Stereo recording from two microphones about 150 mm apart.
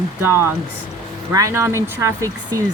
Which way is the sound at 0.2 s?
15° right (ahead or behind).